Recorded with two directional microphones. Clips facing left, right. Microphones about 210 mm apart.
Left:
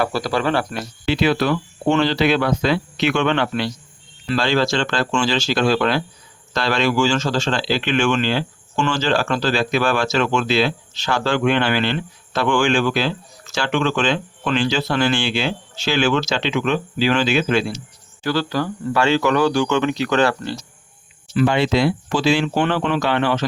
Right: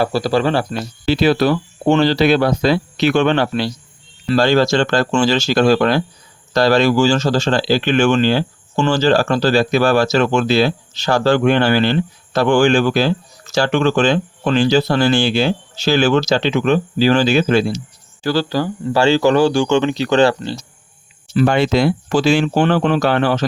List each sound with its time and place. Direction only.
0.0 s speech: 30° right (ahead or behind)
21.3 s speech: 45° right (ahead or behind)